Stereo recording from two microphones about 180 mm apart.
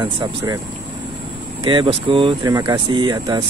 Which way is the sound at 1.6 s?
25° right (ahead or behind).